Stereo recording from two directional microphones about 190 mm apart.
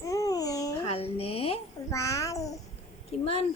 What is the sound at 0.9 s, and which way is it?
Speech, 30° left (ahead or behind).